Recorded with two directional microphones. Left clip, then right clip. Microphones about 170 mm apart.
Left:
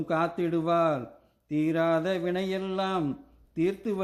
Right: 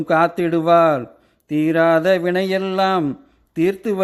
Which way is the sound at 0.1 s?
35° right (ahead or behind).